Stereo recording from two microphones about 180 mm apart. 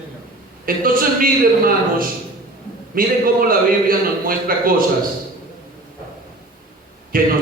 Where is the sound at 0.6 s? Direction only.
50° right (ahead or behind).